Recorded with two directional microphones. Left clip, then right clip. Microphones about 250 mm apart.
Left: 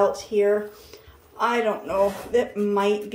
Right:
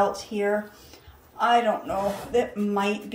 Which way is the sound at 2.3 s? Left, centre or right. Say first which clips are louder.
Left 3 dB; centre.